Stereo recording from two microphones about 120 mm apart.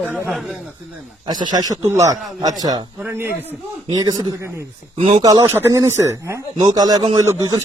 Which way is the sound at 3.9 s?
35° right (ahead or behind).